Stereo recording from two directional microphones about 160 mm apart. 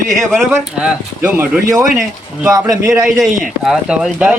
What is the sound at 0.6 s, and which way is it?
Speech, 5° right (ahead or behind).